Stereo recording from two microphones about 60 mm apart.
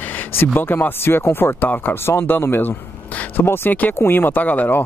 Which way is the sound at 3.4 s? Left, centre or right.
Left.